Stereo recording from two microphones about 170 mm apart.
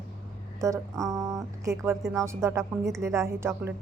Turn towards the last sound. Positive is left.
turn(degrees=-15)  # may be behind; listen again after turning